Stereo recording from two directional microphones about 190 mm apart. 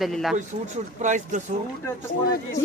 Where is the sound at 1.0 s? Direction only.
40° right (ahead or behind).